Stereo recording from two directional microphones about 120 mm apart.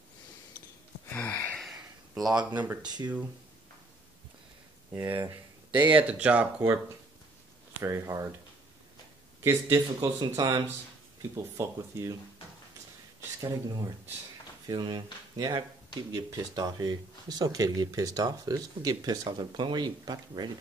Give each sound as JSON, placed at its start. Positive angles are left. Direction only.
{"t": 1.1, "sound": "a sound", "side_deg": 15}
{"t": 1.6, "sound": "a sound", "side_deg": 0}
{"t": 2.3, "sound": "speech", "side_deg": -35}
{"t": 4.9, "sound": "speech", "side_deg": -15}
{"t": 5.7, "sound": "speech", "side_deg": -40}
{"t": 5.9, "sound": "speech", "side_deg": -10}
{"t": 9.4, "sound": "speech", "side_deg": -25}
{"t": 9.9, "sound": "speech", "side_deg": -35}
{"t": 11.3, "sound": "speech", "side_deg": -25}
{"t": 13.4, "sound": "speech", "side_deg": -30}